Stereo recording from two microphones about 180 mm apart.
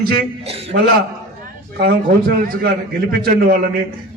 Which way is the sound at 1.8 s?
60° right (ahead or behind).